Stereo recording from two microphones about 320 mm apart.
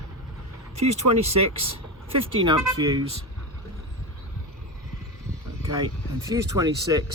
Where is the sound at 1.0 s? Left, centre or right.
Right.